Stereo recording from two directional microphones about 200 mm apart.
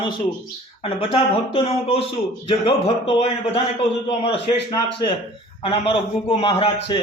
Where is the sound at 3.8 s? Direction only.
25° left (ahead or behind).